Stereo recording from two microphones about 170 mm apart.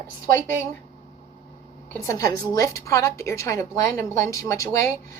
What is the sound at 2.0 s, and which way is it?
A woman's voice, 20° left (ahead or behind).